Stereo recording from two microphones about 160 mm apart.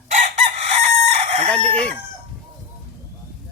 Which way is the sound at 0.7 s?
40° right (ahead or behind).